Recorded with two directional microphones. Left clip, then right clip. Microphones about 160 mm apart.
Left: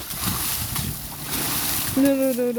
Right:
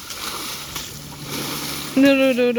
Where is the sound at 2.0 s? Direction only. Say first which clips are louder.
Right 6 dB; 5° right (ahead or behind).